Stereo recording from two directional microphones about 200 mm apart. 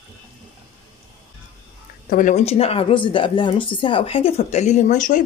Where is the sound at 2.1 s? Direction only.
40° left (ahead or behind).